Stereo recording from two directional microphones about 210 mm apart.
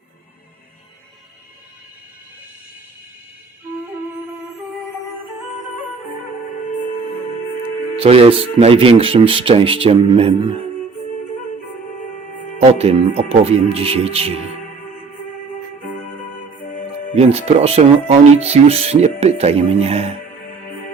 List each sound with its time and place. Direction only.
7.9 s speech: 25° right (ahead or behind)
12.5 s speech: 30° right (ahead or behind)
17.2 s speech: 30° right (ahead or behind)